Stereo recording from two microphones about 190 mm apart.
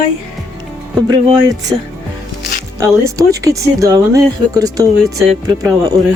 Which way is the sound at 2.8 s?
15° right (ahead or behind).